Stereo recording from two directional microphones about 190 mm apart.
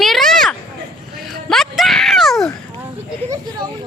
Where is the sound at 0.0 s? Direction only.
Centre (ahead or behind).